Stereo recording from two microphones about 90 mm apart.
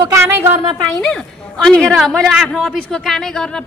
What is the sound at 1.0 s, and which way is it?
A woman's voice, 5° left (ahead or behind).